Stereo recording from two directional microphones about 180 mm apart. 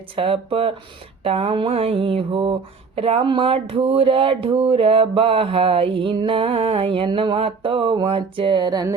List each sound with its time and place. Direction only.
0.2 s mantra: 30° right (ahead or behind)